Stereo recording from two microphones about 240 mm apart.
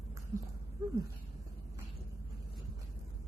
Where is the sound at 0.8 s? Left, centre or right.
Centre.